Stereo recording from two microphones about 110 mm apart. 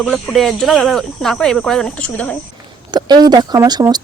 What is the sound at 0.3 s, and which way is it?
Speech, centre (ahead or behind).